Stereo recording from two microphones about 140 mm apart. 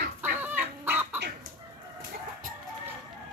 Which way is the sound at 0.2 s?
15° right (ahead or behind).